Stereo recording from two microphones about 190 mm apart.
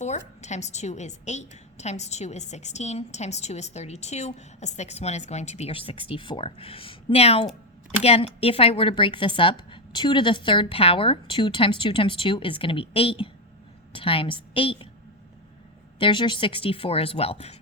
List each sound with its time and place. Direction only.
0.0 s a woman's voice: 35° left (ahead or behind)
16.0 s speech: 25° left (ahead or behind)